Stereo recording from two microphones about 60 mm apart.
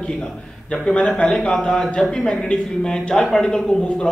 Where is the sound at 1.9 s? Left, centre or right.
Centre.